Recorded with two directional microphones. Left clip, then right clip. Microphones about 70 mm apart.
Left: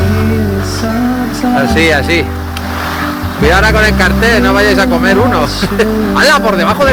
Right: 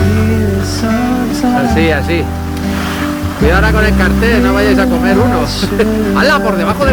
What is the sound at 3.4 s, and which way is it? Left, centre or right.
Speech, right.